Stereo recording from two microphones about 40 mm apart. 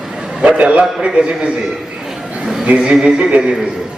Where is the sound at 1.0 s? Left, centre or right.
Right.